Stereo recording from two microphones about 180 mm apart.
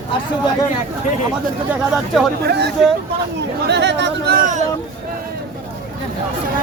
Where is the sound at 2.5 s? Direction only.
65° right (ahead or behind); by 4.6 s 50° right (ahead or behind).